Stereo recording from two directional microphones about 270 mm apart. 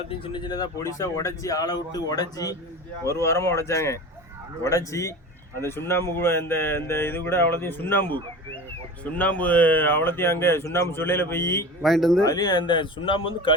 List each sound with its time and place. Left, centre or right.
0.1 s speech: centre
12.2 s speech: centre